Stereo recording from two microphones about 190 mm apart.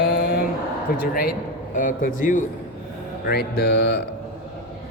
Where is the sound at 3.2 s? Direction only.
60° left (ahead or behind).